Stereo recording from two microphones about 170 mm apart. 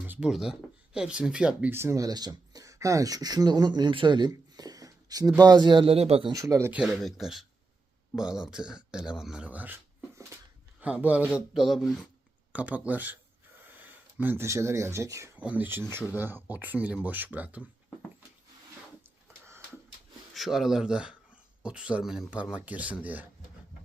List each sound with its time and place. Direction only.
0.0 s speech: 5° right (ahead or behind); by 6.3 s 35° right (ahead or behind)
6.3 s speech: 20° right (ahead or behind)
10.8 s speech: 10° right (ahead or behind)
20.3 s speech: centre (ahead or behind)